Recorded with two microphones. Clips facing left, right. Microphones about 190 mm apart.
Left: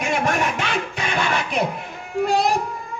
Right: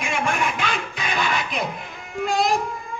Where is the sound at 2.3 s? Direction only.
65° left (ahead or behind).